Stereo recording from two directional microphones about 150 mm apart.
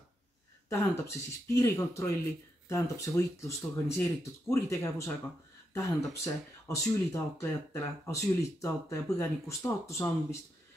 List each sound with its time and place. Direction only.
0.7 s speech: 20° left (ahead or behind)